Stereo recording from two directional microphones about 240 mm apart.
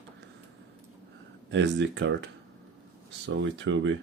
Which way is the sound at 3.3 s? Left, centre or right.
Right.